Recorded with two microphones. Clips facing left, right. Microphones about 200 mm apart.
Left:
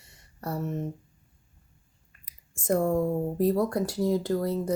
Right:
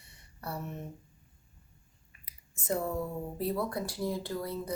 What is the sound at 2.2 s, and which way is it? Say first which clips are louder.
Speech: left 6 dB; 50° left (ahead or behind).